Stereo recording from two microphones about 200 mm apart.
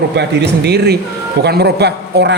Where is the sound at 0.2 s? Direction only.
55° right (ahead or behind).